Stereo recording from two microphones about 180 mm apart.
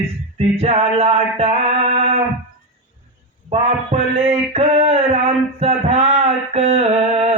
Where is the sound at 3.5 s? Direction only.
35° right (ahead or behind).